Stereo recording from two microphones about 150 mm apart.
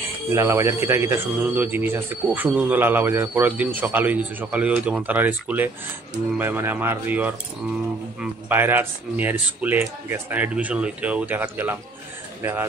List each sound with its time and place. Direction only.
0.3 s speech: 20° right (ahead or behind)